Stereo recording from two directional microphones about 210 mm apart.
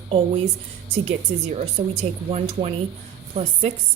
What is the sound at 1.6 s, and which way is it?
A woman's voice, 30° right (ahead or behind).